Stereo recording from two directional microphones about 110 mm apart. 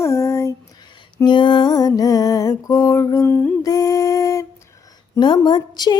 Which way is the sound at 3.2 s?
15° left (ahead or behind).